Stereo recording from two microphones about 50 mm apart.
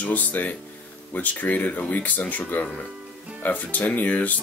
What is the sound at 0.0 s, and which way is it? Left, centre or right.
Speech, left.